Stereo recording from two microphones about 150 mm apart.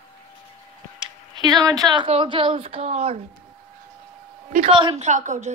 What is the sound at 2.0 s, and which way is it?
A woman's voice, 35° right (ahead or behind).